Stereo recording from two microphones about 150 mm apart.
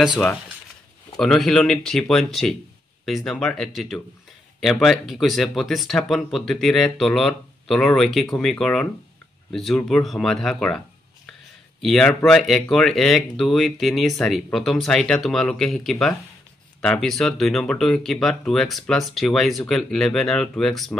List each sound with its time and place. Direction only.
0.0 s speech: 5° right (ahead or behind)
11.8 s speech: 5° left (ahead or behind)